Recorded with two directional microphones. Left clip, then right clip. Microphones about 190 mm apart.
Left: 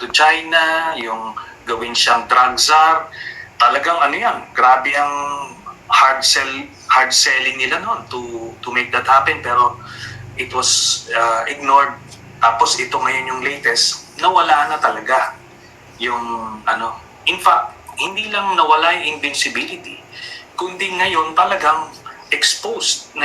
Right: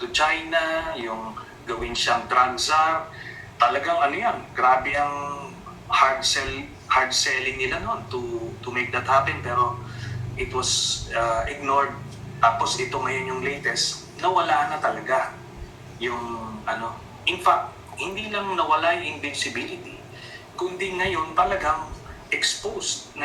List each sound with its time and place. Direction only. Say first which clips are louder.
0.0 s a man's voice: left 9 dB; 25° left (ahead or behind)
16.6 s a man's voice: left 10 dB; 25° left (ahead or behind)